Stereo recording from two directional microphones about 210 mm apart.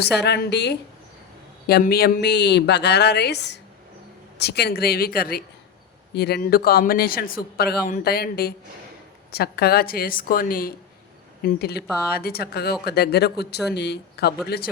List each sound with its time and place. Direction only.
0.2 s a man's voice: 55° left (ahead or behind)